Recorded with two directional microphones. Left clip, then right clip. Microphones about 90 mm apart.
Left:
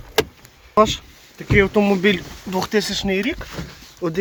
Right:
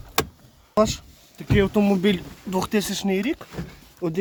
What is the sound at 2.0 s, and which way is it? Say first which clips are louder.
Speech: left 5 dB; 20° right (ahead or behind).